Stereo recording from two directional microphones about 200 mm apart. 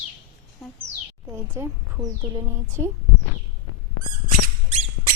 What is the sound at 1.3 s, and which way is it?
A child's voice, 15° right (ahead or behind).